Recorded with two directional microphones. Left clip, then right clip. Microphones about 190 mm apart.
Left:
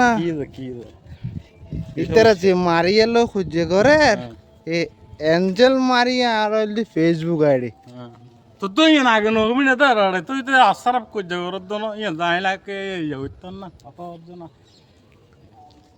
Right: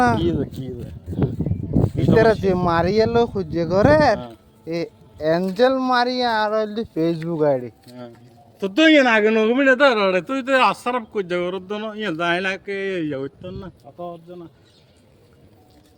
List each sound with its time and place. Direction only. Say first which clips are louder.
0.0 s a sound: left 1 dB; 20° left (ahead or behind)
2.1 s speech: left 3 dB; 30° left (ahead or behind)
8.5 s speech: right 1 dB; 30° left (ahead or behind)